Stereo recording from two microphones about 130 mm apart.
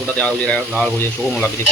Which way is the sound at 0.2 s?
10° left (ahead or behind).